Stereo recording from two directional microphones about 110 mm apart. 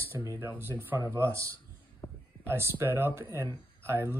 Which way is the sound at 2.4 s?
20° right (ahead or behind).